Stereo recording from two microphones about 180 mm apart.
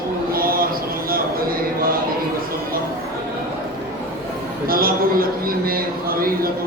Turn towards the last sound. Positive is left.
turn(degrees=-55)  # may be behind; listen again after turning